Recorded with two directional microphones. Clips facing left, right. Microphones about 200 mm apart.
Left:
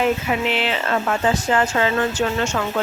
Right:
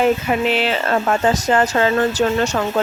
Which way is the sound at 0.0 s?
40° right (ahead or behind).